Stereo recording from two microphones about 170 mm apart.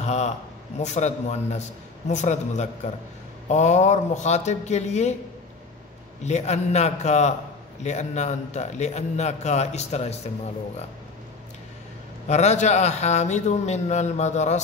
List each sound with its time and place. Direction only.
0.0 s a sound: 40° left (ahead or behind)
0.7 s a man's voice: 40° left (ahead or behind)
6.2 s a man's voice: 40° left (ahead or behind)
12.3 s a man's voice: 40° left (ahead or behind)